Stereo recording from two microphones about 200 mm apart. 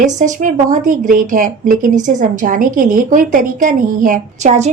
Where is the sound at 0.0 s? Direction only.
40° right (ahead or behind).